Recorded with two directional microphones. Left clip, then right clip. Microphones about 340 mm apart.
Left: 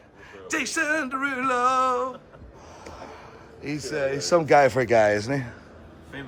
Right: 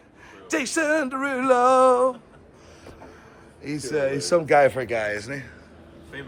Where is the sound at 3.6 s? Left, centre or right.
Centre.